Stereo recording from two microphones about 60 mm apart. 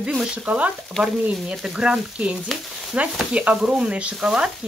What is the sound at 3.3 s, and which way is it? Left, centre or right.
Stir, centre.